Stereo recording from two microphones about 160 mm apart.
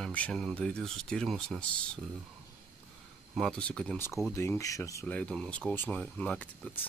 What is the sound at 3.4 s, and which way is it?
Speech, 5° left (ahead or behind).